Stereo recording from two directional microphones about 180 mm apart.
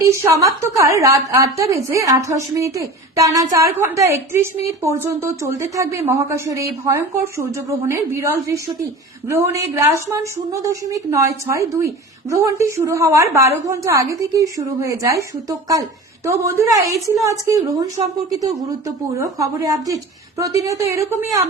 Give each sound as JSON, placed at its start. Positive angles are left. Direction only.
{"t": 0.1, "sound": "a woman's voice", "side_deg": -15}
{"t": 19.2, "sound": "a woman's voice", "side_deg": -15}